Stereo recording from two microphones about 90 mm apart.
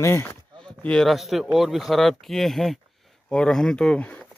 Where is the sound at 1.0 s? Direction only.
Centre (ahead or behind).